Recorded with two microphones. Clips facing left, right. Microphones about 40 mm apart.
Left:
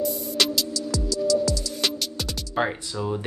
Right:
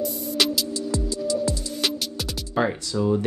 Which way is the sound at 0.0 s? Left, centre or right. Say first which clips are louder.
Even; centre.